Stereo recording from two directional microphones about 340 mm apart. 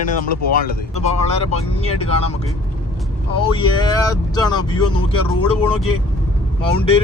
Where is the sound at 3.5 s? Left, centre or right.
Centre.